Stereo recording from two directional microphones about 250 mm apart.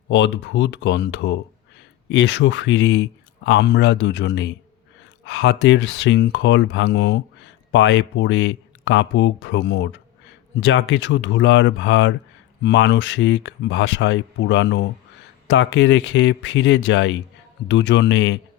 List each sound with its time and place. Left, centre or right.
0.1 s speech: left